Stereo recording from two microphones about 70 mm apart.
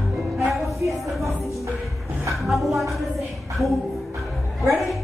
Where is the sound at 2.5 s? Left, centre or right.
Centre.